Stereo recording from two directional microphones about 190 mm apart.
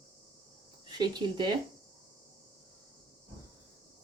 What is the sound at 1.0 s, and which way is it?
Speech, 25° right (ahead or behind).